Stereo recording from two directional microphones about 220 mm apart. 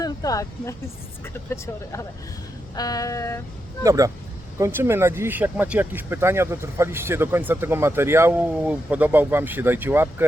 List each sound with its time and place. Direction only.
0.0 s speech: 15° left (ahead or behind)
3.8 s speech: 15° right (ahead or behind)